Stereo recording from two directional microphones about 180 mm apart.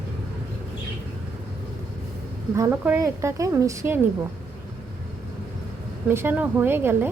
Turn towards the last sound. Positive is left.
turn(degrees=-10)  # may be behind; listen again after turning